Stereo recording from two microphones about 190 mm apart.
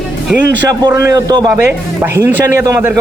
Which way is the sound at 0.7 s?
15° right (ahead or behind).